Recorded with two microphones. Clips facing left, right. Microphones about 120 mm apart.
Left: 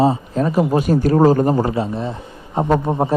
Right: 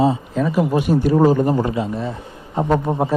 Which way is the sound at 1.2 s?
40° left (ahead or behind).